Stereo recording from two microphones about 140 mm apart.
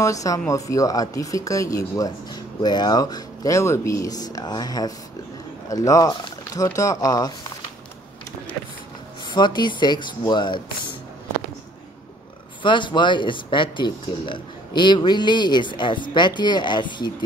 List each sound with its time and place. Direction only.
0.0 s speech: 25° left (ahead or behind)
9.3 s speech: 30° left (ahead or behind)
12.6 s speech: 35° left (ahead or behind)